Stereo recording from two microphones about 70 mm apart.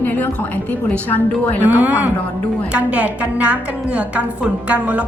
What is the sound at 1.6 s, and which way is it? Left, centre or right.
A woman's voice, right.